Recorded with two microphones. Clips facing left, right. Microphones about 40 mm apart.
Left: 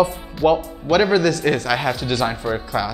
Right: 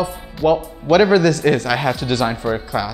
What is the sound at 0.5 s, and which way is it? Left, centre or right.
A man's voice, centre.